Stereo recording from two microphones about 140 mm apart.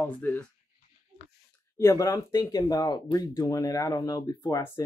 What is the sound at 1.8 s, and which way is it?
Speech, 20° left (ahead or behind).